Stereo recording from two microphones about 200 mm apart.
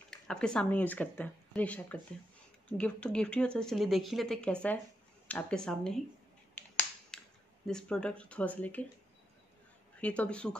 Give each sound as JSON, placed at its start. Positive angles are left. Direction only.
{"t": 0.1, "sound": "speech", "side_deg": 5}
{"t": 6.5, "sound": "finger snapping", "side_deg": 10}
{"t": 7.6, "sound": "speech", "side_deg": 5}
{"t": 9.9, "sound": "speech", "side_deg": 5}